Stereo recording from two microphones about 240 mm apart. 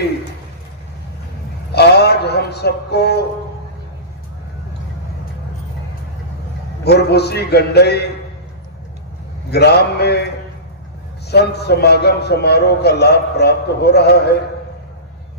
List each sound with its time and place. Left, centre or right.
1.7 s a sound: left
6.8 s a man's voice: left
9.5 s a man's voice: left
11.2 s a man's voice: left